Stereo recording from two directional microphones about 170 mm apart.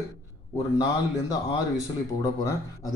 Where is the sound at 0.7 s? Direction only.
20° left (ahead or behind).